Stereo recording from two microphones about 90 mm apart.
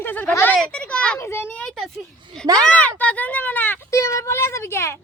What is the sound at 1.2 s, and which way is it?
Speech, 30° left (ahead or behind).